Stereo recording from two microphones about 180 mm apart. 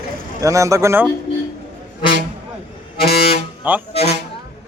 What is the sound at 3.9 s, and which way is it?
Speech, 35° left (ahead or behind).